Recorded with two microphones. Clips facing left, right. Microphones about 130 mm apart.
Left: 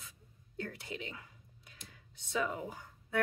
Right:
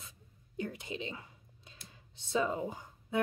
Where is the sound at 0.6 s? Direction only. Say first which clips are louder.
Right 3 dB; 20° right (ahead or behind).